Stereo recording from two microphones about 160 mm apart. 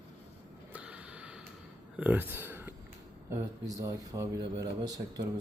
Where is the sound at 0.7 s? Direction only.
5° right (ahead or behind).